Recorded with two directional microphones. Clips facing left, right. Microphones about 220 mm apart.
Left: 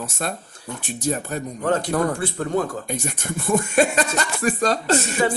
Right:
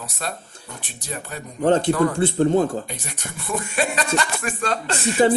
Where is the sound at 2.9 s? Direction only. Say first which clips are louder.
Left 8 dB; 45° left (ahead or behind).